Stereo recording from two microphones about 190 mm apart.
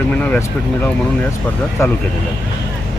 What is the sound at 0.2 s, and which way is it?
Speech, 10° left (ahead or behind).